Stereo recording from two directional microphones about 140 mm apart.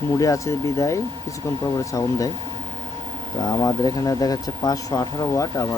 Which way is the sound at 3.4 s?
25° left (ahead or behind).